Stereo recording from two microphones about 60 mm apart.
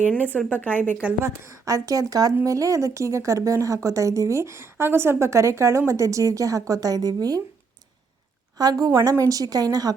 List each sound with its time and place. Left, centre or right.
0.3 s speech: left
1.2 s a woman's voice: right
2.4 s a woman's voice: right
8.5 s speech: right